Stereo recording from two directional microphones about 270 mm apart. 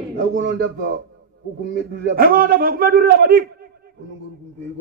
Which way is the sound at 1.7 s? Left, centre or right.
Right.